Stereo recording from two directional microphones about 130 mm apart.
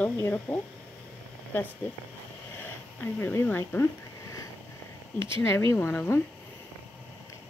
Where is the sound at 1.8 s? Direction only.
15° left (ahead or behind).